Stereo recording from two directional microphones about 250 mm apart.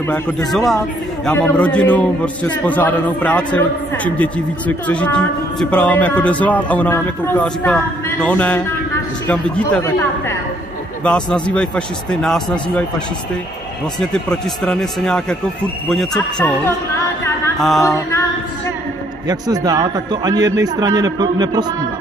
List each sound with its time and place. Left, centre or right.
0.1 s a man's voice: centre
13.9 s a man's voice: centre
17.6 s a man's voice: centre
17.8 s speech: centre
19.2 s a man's voice: centre